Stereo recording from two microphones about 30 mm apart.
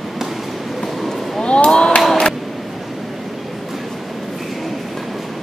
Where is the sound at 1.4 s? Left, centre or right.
Left.